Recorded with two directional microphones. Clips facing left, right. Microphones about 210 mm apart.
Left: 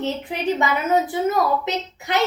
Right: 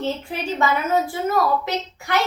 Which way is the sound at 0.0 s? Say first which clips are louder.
Left 2 dB; 20° left (ahead or behind).